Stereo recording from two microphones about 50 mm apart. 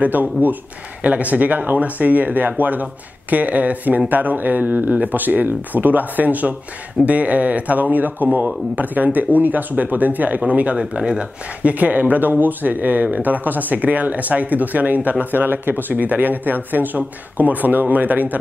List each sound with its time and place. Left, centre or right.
0.0 s a man's voice: right
11.0 s speech: centre
11.6 s speech: right